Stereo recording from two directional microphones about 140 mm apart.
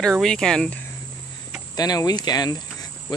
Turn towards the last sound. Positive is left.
turn(degrees=30)  # may be behind; listen again after turning